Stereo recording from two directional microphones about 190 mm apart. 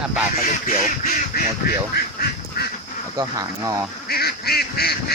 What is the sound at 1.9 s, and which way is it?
Duck, 55° left (ahead or behind).